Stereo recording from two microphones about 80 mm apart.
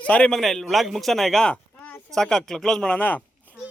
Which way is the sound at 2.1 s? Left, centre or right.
Centre.